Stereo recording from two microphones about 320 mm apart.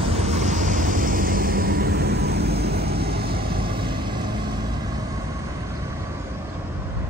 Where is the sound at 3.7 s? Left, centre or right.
Centre.